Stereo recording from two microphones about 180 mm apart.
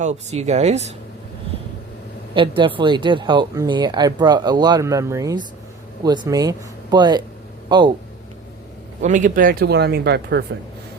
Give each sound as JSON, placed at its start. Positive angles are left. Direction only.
{"t": 0.0, "sound": "speech", "side_deg": -40}
{"t": 2.3, "sound": "speech", "side_deg": -30}
{"t": 9.0, "sound": "speech", "side_deg": -45}